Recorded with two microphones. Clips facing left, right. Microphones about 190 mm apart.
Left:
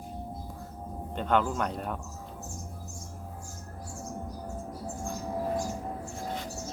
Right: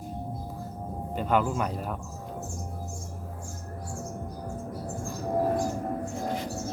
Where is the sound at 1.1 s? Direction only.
5° right (ahead or behind).